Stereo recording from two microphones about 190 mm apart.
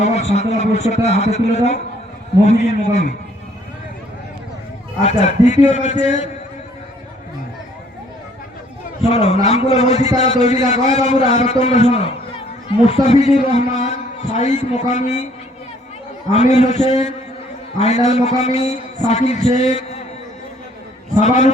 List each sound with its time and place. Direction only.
0.0 s a man's voice: 35° left (ahead or behind)
5.0 s a man's voice: 35° left (ahead or behind)
9.0 s a man's voice: 35° left (ahead or behind)
16.3 s a man's voice: 35° left (ahead or behind)
21.2 s a man's voice: 40° left (ahead or behind)